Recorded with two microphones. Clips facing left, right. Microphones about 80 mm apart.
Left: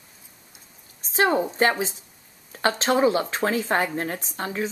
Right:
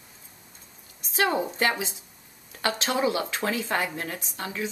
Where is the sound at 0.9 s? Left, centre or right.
Left.